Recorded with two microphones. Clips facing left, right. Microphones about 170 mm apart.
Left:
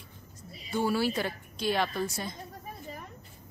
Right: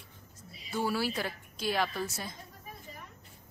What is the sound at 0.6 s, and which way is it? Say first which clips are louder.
Speech: left 4 dB; centre (ahead or behind).